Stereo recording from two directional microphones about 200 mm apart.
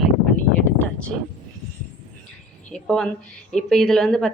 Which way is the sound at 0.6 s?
5° left (ahead or behind).